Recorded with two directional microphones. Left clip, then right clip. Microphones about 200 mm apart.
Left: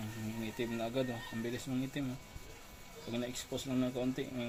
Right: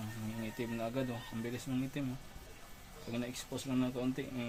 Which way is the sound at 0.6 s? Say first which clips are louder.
Left 2 dB; 25° right (ahead or behind).